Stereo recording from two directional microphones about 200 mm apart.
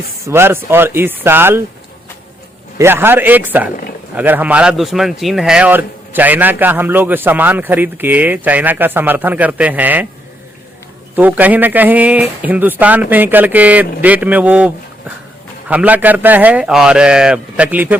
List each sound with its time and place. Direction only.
0.3 s a man's voice: 10° right (ahead or behind)
2.7 s a man's voice: 10° right (ahead or behind)
11.1 s a man's voice: 10° right (ahead or behind)
15.7 s a man's voice: 10° right (ahead or behind)